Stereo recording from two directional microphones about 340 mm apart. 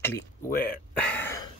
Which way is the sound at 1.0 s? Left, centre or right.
Centre.